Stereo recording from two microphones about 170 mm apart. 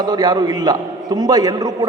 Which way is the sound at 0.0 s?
25° right (ahead or behind).